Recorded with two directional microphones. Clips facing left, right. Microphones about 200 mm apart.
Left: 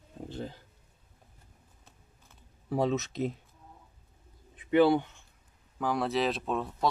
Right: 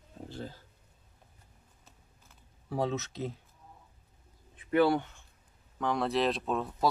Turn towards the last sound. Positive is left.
turn(degrees=0)  # may be behind; listen again after turning